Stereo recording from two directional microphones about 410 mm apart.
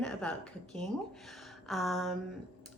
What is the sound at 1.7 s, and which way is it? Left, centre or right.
Speech, centre.